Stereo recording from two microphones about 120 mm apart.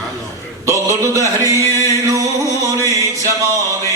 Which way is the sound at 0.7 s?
25° right (ahead or behind).